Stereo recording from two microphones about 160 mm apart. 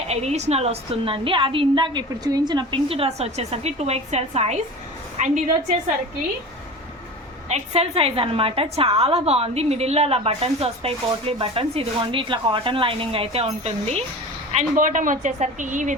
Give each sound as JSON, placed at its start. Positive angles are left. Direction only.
{"t": 0.1, "sound": "a woman's voice", "side_deg": -40}
{"t": 7.4, "sound": "a woman's voice", "side_deg": -40}
{"t": 14.5, "sound": "a woman's voice", "side_deg": -55}